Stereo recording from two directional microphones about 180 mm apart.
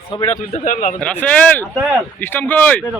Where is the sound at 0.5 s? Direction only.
50° left (ahead or behind).